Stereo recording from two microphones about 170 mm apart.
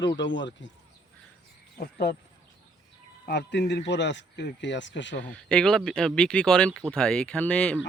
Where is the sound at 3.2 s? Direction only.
80° left.